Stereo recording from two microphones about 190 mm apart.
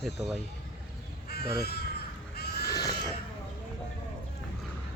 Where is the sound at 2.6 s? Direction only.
20° left (ahead or behind).